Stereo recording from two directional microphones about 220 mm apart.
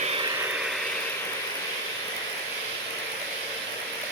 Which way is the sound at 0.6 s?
Centre (ahead or behind).